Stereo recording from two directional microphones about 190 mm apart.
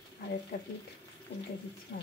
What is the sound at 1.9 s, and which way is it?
Speech, 55° left (ahead or behind).